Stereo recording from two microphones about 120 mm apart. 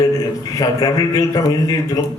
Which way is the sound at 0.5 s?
30° left (ahead or behind).